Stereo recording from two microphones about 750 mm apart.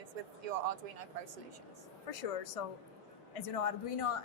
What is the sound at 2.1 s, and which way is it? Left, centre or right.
A woman's voice, left.